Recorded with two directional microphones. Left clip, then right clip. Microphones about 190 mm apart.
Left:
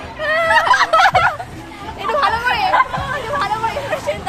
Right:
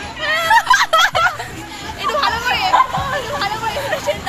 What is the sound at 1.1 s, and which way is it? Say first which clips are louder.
Music: left 2 dB; 55° left (ahead or behind).